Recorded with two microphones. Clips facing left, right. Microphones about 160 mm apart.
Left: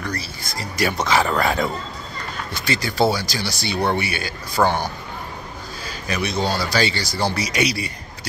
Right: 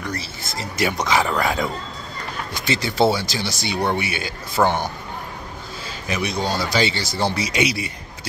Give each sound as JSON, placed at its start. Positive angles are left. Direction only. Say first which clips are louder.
{"t": 0.0, "sound": "speech", "louder": "even", "side_deg": -25}
{"t": 2.5, "sound": "speech", "louder": "right 1 dB", "side_deg": -25}
{"t": 6.0, "sound": "speech", "louder": "left 1 dB", "side_deg": -20}